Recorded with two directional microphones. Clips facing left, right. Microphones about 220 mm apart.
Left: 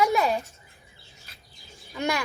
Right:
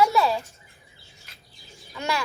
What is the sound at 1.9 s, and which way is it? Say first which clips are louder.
Speech: left 1 dB; 15° left (ahead or behind).